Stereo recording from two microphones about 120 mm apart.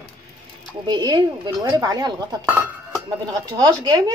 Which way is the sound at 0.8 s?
40° right (ahead or behind).